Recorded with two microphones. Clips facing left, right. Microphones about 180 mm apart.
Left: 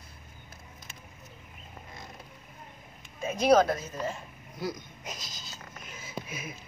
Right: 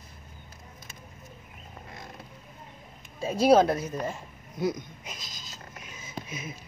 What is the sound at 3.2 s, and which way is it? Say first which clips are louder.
Speech: right 2 dB; 35° right (ahead or behind).